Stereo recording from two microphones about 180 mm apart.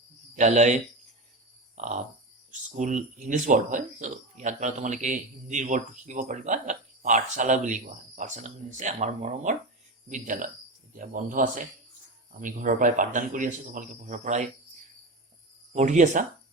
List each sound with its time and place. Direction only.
0.3 s speech: 40° right (ahead or behind)
1.7 s a sound: 40° right (ahead or behind)
2.5 s speech: 45° right (ahead or behind)
15.7 s speech: 40° right (ahead or behind)